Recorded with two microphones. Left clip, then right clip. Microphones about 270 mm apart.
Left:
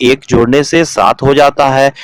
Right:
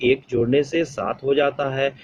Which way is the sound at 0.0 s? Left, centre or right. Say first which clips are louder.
Left 10 dB; left.